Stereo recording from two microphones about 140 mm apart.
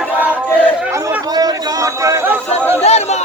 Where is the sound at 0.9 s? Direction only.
20° right (ahead or behind).